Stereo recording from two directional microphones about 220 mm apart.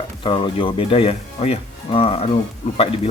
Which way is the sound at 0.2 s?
20° left (ahead or behind).